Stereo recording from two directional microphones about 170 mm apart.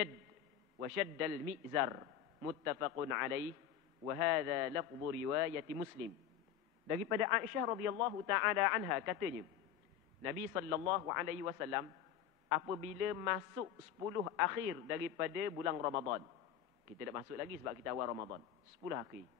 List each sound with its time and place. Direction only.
0.7 s a man's voice: 20° right (ahead or behind)
7.1 s speech: 15° right (ahead or behind)
10.2 s a man's voice: 20° right (ahead or behind)